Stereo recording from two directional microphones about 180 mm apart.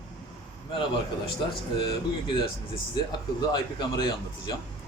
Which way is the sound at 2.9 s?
25° left (ahead or behind).